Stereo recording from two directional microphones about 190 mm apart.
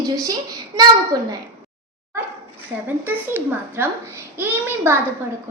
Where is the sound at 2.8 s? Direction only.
10° right (ahead or behind).